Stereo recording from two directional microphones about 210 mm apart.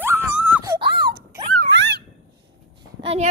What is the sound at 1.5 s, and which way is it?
Dog, 60° right (ahead or behind).